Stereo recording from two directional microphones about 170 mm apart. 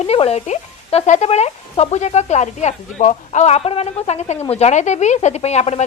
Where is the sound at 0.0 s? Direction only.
35° left (ahead or behind).